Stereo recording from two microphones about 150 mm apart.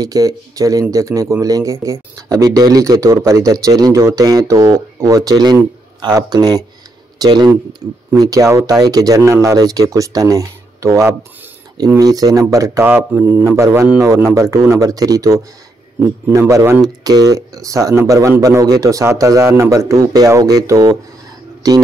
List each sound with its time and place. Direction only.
0.0 s speech: 25° right (ahead or behind)